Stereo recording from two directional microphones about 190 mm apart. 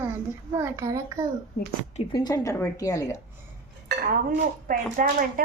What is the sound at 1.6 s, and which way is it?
Speech, 60° left (ahead or behind).